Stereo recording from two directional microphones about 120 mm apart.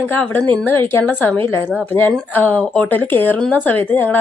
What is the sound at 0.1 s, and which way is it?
Speech, 10° left (ahead or behind).